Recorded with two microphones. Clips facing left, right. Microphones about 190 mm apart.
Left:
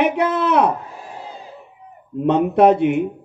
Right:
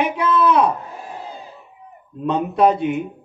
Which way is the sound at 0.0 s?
70° left (ahead or behind).